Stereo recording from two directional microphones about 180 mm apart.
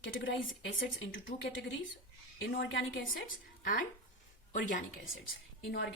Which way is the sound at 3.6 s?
50° left (ahead or behind).